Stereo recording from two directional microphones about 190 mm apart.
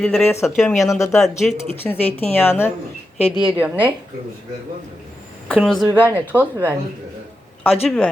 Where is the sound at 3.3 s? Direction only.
5° right (ahead or behind).